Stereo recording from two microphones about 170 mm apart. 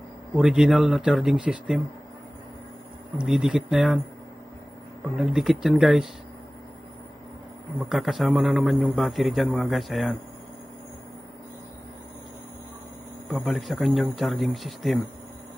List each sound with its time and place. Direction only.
0.4 s a man's voice: centre (ahead or behind)
3.3 s a man's voice: 5° right (ahead or behind)
5.1 s a man's voice: centre (ahead or behind)
7.9 s a man's voice: centre (ahead or behind)
13.3 s a man's voice: centre (ahead or behind)